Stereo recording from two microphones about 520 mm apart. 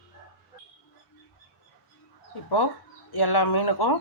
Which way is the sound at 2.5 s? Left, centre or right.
Left.